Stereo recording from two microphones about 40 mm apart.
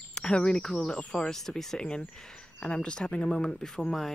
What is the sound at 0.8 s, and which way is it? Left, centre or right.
Speech, left.